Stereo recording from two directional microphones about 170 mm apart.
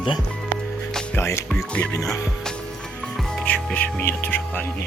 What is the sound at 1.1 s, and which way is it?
Music, 15° left (ahead or behind).